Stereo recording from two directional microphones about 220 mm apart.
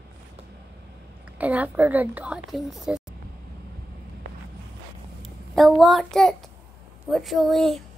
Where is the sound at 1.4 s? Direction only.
5° right (ahead or behind).